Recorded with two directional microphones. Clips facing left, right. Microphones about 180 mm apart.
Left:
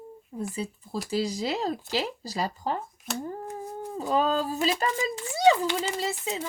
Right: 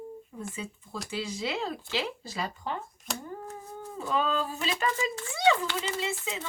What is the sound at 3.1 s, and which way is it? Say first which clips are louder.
Speech: left 5 dB; centre (ahead or behind).